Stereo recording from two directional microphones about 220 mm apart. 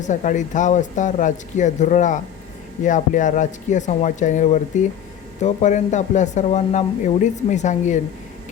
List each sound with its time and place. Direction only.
0.0 s speech: 35° left (ahead or behind)